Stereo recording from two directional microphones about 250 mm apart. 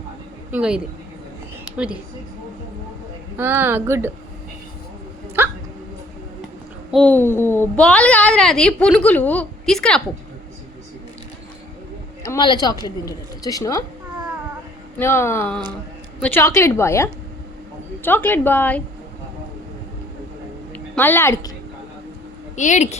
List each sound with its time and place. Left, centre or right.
0.5 s a child's voice: centre
3.3 s a woman's voice: centre
5.4 s hiccup: centre
6.9 s a child's voice: centre
12.2 s a woman's voice: centre
14.9 s a woman's voice: centre
20.7 s a woman's voice: centre
22.5 s speech: left